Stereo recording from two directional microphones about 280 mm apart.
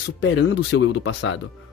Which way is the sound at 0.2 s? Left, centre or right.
Left.